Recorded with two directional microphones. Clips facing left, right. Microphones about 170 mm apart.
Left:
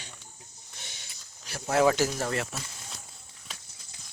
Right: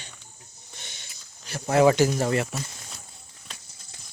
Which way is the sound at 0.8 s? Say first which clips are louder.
Even; 5° left (ahead or behind).